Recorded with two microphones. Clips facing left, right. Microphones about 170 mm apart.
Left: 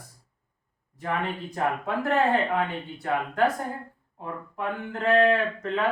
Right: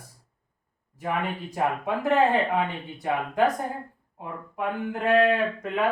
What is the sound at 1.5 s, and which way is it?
Speech, 15° right (ahead or behind).